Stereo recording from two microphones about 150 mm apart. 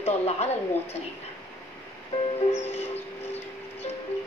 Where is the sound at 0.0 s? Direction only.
45° left (ahead or behind).